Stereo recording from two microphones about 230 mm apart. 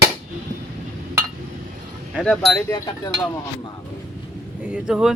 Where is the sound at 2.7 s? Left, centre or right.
Centre.